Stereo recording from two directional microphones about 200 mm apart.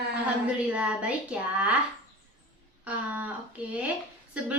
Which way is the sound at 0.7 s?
5° right (ahead or behind).